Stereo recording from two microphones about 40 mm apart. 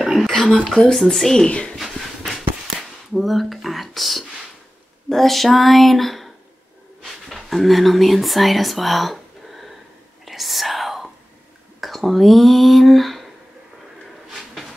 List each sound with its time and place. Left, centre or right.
0.0 s a sound: centre
0.3 s a sound: centre
0.9 s speech: centre
1.5 s speech: left
1.8 s a sound: centre
5.1 s speech: centre
10.2 s whispering: centre
11.8 s speech: centre
14.3 s drawer open or close: centre